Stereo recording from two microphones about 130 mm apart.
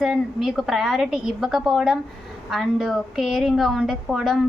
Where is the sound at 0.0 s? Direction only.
5° right (ahead or behind).